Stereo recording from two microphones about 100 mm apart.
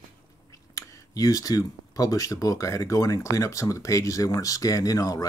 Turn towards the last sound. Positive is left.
turn(degrees=35)  # may be behind; listen again after turning